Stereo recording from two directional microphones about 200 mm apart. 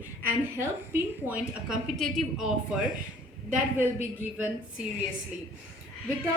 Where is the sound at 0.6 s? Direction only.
10° right (ahead or behind).